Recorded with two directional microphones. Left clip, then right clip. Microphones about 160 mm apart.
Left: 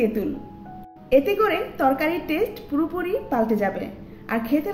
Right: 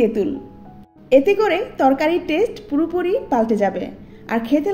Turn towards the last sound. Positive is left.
turn(degrees=-25)  # may be behind; listen again after turning